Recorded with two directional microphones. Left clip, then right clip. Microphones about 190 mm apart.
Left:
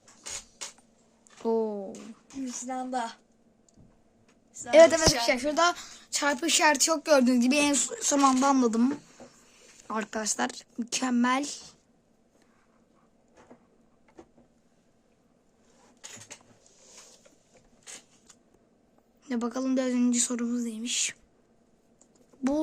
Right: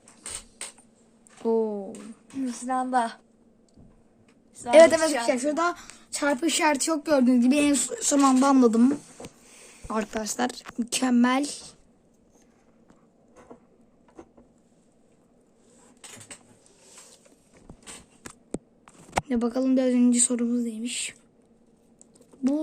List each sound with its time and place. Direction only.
1.4 s a sound: 10° left (ahead or behind)
2.3 s a woman's voice: 30° right (ahead or behind)
4.7 s a woman's voice: centre (ahead or behind)
19.2 s a woman's voice: 5° left (ahead or behind)